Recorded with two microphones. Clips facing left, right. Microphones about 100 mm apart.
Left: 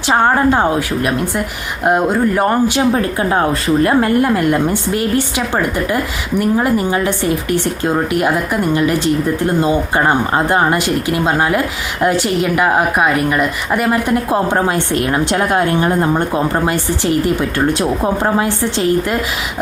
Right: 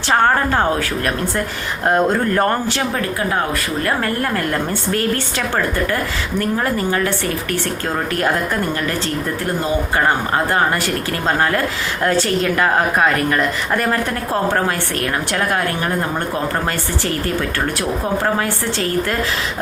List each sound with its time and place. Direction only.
0.1 s a woman's voice: 15° left (ahead or behind)
6.4 s a woman's voice: 15° left (ahead or behind)